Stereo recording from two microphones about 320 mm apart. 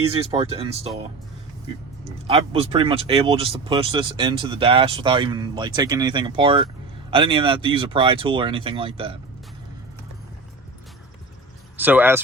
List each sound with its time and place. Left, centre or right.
0.1 s speech: centre
2.2 s speech: centre
11.8 s speech: centre